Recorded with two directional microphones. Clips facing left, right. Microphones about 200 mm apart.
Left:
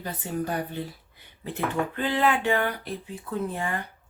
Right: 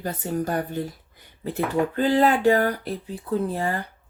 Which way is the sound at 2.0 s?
40° right (ahead or behind).